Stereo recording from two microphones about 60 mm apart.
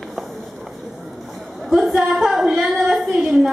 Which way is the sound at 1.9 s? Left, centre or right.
Centre.